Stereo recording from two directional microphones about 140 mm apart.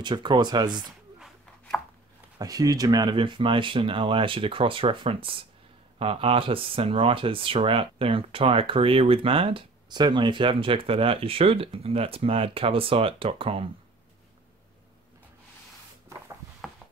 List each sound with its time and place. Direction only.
0.0 s speech: 35° right (ahead or behind)
2.3 s speech: 25° right (ahead or behind); by 13.7 s 40° right (ahead or behind)
16.6 s a sound: centre (ahead or behind)